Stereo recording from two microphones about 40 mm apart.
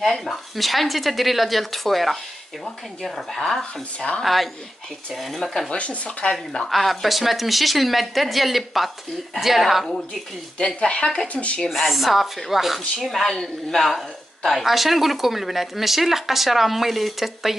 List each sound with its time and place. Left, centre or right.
0.2 s a woman's voice: centre
4.2 s speech: centre
5.7 s speech: left
6.7 s speech: centre
10.8 s speech: left
11.7 s speech: centre
13.3 s a woman's voice: centre